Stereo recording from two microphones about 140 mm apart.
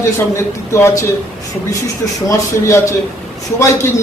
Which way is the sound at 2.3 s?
20° left (ahead or behind).